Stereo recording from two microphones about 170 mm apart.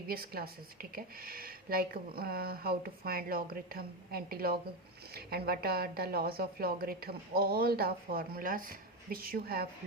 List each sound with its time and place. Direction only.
0.1 s a woman's voice: 60° right (ahead or behind)